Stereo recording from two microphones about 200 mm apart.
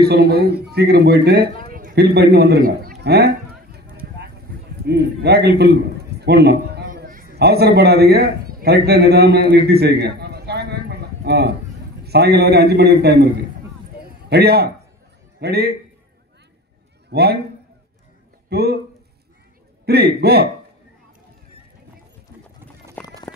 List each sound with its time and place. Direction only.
0.1 s a man's voice: 55° right (ahead or behind)
1.6 s a sound: 45° right (ahead or behind)
4.8 s a man's voice: 55° right (ahead or behind)
14.0 s a sound: 55° right (ahead or behind)
15.4 s a man's voice: 55° right (ahead or behind)
17.1 s a man's voice: 55° right (ahead or behind)
18.5 s speech: 55° right (ahead or behind)
19.9 s a man's voice: 55° right (ahead or behind)
23.0 s clip-clop: 5° left (ahead or behind)